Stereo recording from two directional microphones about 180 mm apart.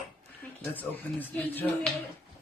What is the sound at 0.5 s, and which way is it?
Speech, 10° left (ahead or behind).